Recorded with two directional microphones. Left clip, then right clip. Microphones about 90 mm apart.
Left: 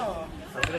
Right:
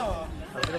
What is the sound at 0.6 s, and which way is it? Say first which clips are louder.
Speech: left 2 dB; 5° right (ahead or behind).